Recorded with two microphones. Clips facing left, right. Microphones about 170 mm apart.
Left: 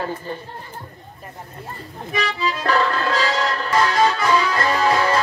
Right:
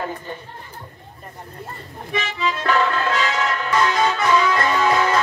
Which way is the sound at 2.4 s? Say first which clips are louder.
Right 1 dB; 35° left (ahead or behind).